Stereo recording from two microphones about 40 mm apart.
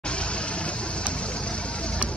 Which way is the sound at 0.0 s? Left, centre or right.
Left.